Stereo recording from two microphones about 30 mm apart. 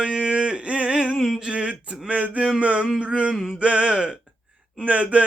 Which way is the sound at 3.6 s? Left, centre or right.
Right.